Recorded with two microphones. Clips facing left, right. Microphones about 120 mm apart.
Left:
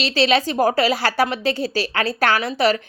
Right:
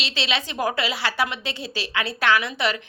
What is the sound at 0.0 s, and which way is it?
A woman's voice, 40° left (ahead or behind).